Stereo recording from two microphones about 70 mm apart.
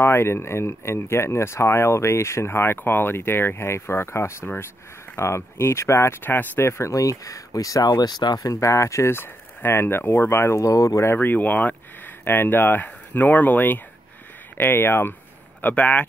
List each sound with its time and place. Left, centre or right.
0.0 s speech: left
6.2 s speech: left
6.7 s speech: left
11.1 s speech: left
15.6 s speech: left